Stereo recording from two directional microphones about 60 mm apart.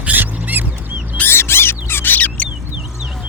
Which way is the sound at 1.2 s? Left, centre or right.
Left.